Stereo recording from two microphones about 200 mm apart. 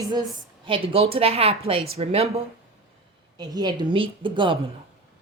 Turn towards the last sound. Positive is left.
turn(degrees=-25)  # may be behind; listen again after turning